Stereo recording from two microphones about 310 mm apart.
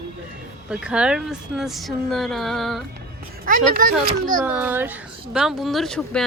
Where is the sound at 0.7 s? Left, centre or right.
Centre.